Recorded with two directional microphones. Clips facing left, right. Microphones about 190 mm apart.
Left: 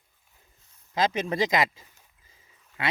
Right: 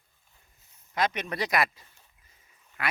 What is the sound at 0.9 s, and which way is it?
Speech, 25° left (ahead or behind).